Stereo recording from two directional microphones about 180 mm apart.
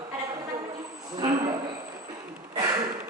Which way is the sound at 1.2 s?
40° right (ahead or behind).